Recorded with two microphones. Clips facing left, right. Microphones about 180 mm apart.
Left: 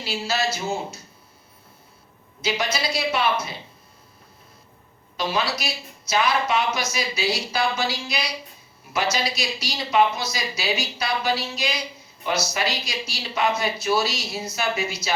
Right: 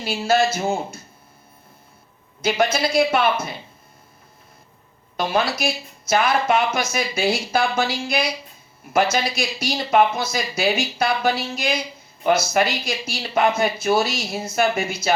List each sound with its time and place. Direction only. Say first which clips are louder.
0.0 s speech: right 7 dB; 50° right (ahead or behind)
2.4 s speech: right 6 dB; 50° right (ahead or behind)
5.1 s speech: right 4 dB; 50° right (ahead or behind)